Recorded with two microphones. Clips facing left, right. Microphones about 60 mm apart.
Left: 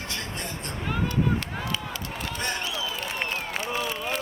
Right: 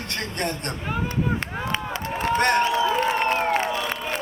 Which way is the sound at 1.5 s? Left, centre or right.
Right.